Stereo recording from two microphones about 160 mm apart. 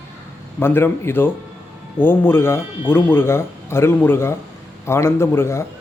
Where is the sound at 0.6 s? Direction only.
15° left (ahead or behind).